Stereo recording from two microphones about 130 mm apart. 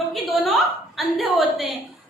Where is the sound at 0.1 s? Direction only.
Centre (ahead or behind).